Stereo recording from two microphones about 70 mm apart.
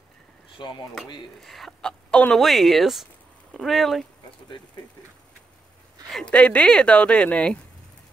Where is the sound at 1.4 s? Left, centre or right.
Centre.